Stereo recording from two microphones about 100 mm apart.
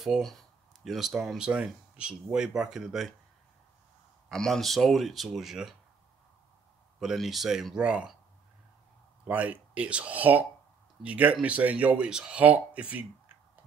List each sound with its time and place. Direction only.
0.0 s speech: centre (ahead or behind)
4.3 s speech: centre (ahead or behind)
7.0 s speech: centre (ahead or behind)
9.2 s speech: 15° right (ahead or behind)